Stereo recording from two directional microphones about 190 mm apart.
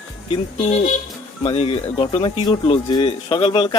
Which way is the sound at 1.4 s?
30° left (ahead or behind).